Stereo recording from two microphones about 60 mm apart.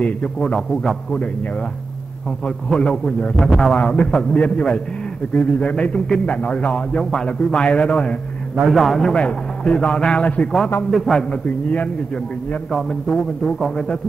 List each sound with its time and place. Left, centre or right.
0.0 s a man's voice: centre
2.4 s a man's voice: centre
3.7 s speech: centre
8.6 s a man's voice: centre
9.1 s a man's voice: centre
10.9 s a man's voice: centre
11.1 s speech: left
12.7 s a man's voice: centre